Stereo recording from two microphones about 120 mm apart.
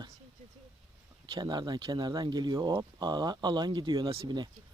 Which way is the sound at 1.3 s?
40° right (ahead or behind).